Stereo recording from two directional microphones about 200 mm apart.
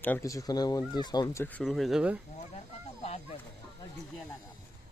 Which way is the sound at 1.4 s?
5° left (ahead or behind).